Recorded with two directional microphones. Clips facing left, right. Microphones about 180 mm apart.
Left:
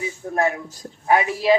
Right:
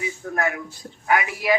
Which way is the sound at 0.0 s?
30° left (ahead or behind).